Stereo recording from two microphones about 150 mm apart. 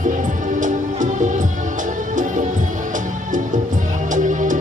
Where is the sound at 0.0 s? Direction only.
60° right (ahead or behind).